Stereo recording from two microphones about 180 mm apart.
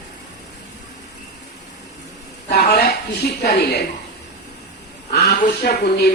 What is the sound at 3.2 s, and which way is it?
Speech, 65° left (ahead or behind).